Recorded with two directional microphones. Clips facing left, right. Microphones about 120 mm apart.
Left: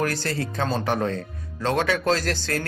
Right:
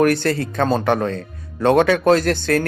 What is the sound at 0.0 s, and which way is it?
Speech, 60° right (ahead or behind).